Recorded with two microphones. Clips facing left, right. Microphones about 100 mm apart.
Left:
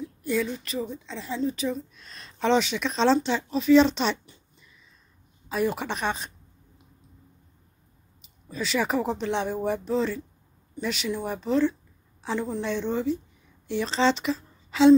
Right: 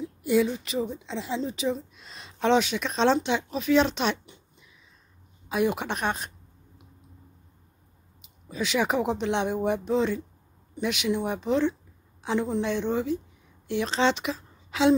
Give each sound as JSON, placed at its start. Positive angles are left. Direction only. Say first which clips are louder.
{"t": 0.3, "sound": "speech", "louder": "right 4 dB", "side_deg": -10}
{"t": 0.7, "sound": "a woman's voice", "louder": "right 2 dB", "side_deg": -25}
{"t": 8.5, "sound": "a woman's voice", "louder": "right 1 dB", "side_deg": -10}